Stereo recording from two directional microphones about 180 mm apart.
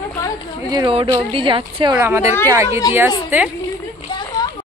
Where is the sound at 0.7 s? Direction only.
25° right (ahead or behind).